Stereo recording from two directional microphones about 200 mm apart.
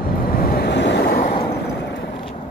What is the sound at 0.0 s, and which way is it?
Vehicle, 45° left (ahead or behind).